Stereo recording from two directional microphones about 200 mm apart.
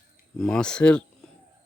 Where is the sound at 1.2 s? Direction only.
5° left (ahead or behind).